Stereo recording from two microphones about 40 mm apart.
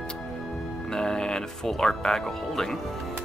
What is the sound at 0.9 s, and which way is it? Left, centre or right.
Speech, centre.